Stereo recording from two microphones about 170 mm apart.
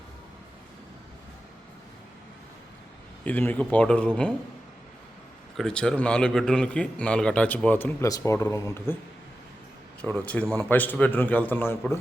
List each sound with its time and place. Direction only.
3.2 s a man's voice: 10° left (ahead or behind)
5.5 s a man's voice: 5° left (ahead or behind)
10.0 s a man's voice: 5° left (ahead or behind)